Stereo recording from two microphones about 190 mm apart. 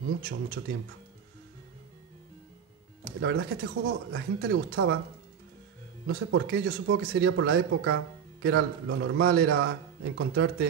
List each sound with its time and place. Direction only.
0.2 s speech: 60° right (ahead or behind)
3.2 s speech: 65° right (ahead or behind)
6.0 s speech: 65° right (ahead or behind)